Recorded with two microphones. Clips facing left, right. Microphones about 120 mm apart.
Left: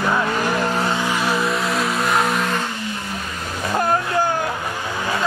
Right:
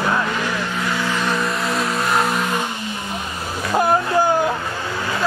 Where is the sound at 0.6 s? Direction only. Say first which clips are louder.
Left 4 dB; 40° left (ahead or behind).